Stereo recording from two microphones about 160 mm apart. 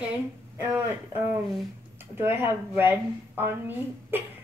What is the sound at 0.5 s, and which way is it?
Speech, 15° right (ahead or behind).